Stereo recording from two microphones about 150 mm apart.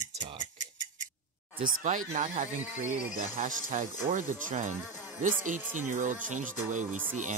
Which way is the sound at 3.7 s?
55° right (ahead or behind).